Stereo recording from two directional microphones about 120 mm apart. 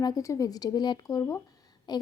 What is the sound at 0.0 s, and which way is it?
Speech, 30° left (ahead or behind).